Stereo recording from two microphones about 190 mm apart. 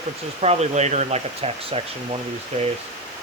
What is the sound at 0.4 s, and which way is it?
Speech, 35° right (ahead or behind).